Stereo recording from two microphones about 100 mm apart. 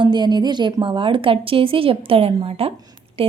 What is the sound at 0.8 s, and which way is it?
A woman's voice, 60° right (ahead or behind).